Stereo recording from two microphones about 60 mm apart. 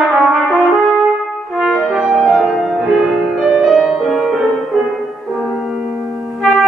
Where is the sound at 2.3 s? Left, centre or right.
Centre.